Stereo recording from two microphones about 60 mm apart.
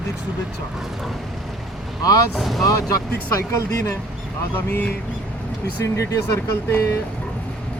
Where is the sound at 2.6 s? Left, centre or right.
Left.